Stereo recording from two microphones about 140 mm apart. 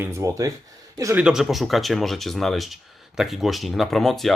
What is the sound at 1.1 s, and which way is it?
Speech, 5° right (ahead or behind).